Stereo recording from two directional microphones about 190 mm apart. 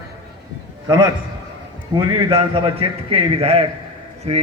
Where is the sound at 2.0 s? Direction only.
25° right (ahead or behind).